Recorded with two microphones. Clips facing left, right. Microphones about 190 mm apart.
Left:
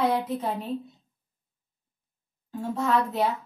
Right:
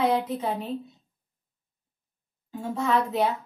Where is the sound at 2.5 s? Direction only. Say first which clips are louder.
Even; centre (ahead or behind).